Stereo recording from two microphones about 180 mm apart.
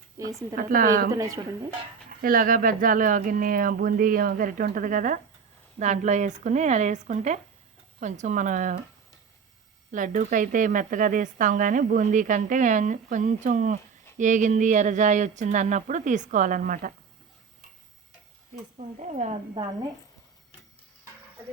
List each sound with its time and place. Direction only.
0.2 s a woman's voice: 20° right (ahead or behind)
0.5 s speech: 50° right (ahead or behind)
1.1 s speech: 20° right (ahead or behind)
2.2 s speech: 50° right (ahead or behind)
9.9 s speech: 45° right (ahead or behind)
18.8 s speech: 40° right (ahead or behind)